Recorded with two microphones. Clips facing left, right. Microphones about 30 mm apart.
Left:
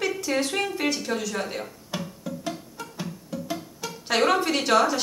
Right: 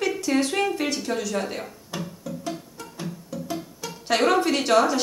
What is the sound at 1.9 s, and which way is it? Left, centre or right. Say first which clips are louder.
Music: even; centre.